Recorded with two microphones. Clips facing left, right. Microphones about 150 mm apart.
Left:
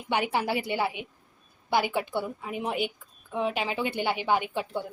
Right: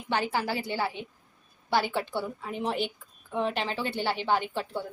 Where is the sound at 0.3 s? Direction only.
20° left (ahead or behind).